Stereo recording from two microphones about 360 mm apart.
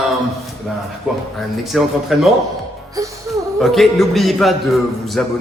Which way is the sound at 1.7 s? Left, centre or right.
Centre.